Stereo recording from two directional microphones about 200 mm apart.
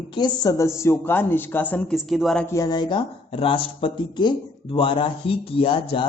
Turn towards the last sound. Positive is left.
turn(degrees=25)  # may be behind; listen again after turning